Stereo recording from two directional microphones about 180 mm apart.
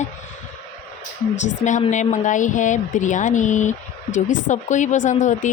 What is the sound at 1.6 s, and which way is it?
Speech, 40° left (ahead or behind).